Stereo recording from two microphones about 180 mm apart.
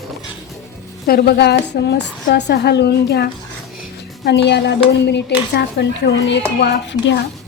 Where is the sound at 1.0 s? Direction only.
60° left (ahead or behind); by 7.2 s 80° left.